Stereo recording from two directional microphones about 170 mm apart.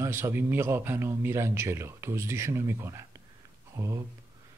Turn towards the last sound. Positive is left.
turn(degrees=-15)  # may be behind; listen again after turning